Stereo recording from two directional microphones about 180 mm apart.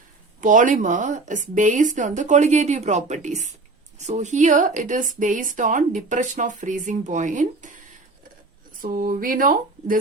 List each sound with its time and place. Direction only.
0.4 s speech: 45° right (ahead or behind)
8.8 s speech: 50° right (ahead or behind)